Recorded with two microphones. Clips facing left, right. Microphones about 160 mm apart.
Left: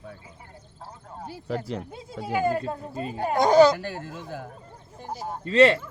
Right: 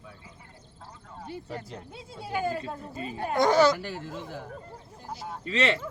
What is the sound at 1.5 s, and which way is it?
Speech, 80° left.